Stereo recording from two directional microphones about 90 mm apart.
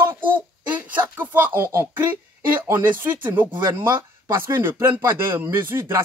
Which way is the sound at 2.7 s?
20° right (ahead or behind).